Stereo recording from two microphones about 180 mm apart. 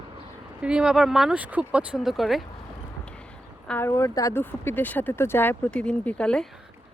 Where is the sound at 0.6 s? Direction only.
5° right (ahead or behind).